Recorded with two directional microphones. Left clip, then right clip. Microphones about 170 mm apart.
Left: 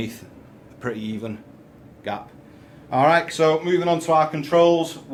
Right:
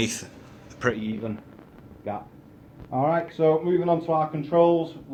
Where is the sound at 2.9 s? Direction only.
15° left (ahead or behind).